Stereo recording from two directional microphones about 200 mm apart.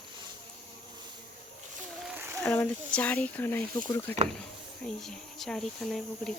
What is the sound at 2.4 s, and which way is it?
Speech, 5° left (ahead or behind).